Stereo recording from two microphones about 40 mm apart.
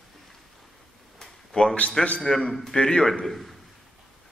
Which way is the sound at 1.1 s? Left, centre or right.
Centre.